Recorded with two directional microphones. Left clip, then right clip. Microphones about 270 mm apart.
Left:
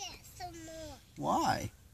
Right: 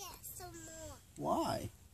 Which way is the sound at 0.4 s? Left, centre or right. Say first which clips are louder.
Left 7 dB; centre.